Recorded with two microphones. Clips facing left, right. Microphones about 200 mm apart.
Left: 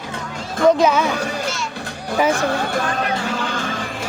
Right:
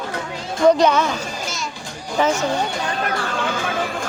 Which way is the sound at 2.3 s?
55° left (ahead or behind).